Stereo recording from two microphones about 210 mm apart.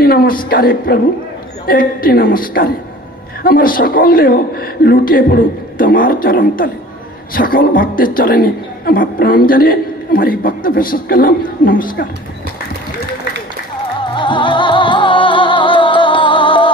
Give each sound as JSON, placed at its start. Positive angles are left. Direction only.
{"t": 0.0, "sound": "a sound", "side_deg": 45}
{"t": 0.5, "sound": "a man's voice", "side_deg": 45}
{"t": 14.0, "sound": "music", "side_deg": 20}